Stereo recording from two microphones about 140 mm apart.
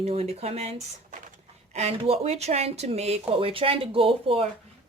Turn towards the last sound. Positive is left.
turn(degrees=-40)  # may be behind; listen again after turning